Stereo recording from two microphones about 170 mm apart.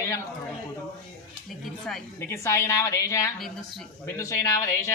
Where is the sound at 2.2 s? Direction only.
15° left (ahead or behind).